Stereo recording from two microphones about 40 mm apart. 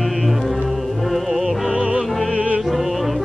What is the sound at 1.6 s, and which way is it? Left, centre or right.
Music, right.